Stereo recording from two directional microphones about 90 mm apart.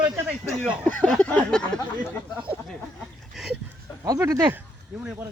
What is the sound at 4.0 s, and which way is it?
Speech, 40° right (ahead or behind).